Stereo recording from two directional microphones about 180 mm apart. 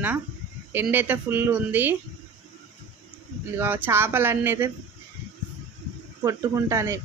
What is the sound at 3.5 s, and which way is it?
Speech, 10° right (ahead or behind).